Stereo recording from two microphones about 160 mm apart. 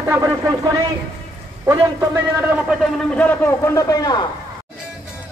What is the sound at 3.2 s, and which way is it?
A man's voice, 10° left (ahead or behind).